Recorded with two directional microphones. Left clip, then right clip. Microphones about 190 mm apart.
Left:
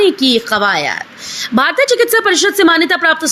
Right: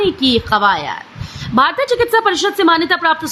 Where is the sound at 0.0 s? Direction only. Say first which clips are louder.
Left 3 dB; 15° left (ahead or behind).